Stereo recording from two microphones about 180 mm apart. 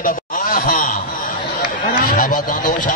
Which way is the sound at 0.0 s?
50° left (ahead or behind).